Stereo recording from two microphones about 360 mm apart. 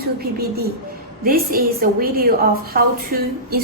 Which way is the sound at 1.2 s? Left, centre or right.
Right.